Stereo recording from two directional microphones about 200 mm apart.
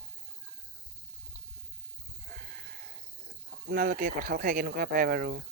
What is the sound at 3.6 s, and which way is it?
Speech, 45° right (ahead or behind).